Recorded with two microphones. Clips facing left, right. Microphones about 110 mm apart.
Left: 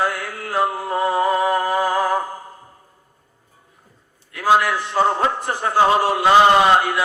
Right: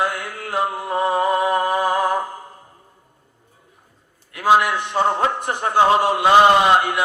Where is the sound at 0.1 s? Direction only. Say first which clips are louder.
Left 1 dB; 20° right (ahead or behind).